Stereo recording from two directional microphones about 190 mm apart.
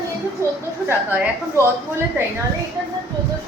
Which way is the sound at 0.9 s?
5° right (ahead or behind).